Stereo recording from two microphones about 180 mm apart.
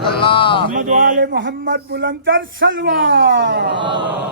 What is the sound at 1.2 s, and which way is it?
Speech, 85° right.